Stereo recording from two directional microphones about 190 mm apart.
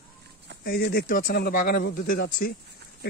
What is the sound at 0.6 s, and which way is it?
Speech, 55° left (ahead or behind).